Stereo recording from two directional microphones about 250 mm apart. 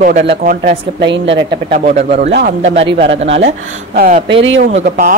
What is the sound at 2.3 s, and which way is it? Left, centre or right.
Speech, right.